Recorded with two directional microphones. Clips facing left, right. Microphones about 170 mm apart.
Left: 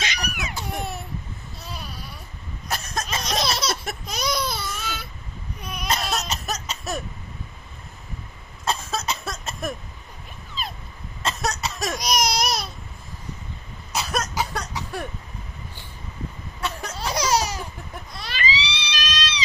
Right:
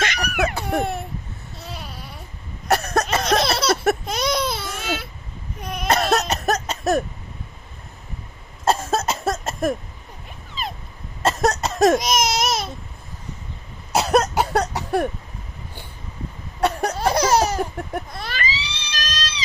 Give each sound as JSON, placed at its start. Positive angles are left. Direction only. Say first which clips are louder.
{"t": 0.0, "sound": "a sound", "louder": "right 8 dB", "side_deg": -60}
{"t": 2.6, "sound": "a sound", "louder": "right 10 dB", "side_deg": -65}
{"t": 4.0, "sound": "baby cry", "louder": "right 4 dB", "side_deg": -25}
{"t": 4.6, "sound": "baby cry", "louder": "right 5 dB", "side_deg": -65}
{"t": 5.9, "sound": "cough", "louder": "right 7 dB", "side_deg": -60}
{"t": 8.6, "sound": "cough", "louder": "right 6 dB", "side_deg": -50}
{"t": 11.2, "sound": "cough", "louder": "right 7 dB", "side_deg": -45}
{"t": 13.9, "sound": "cough", "louder": "right 9 dB", "side_deg": -65}
{"t": 16.6, "sound": "a sound", "louder": "right 9 dB", "side_deg": -65}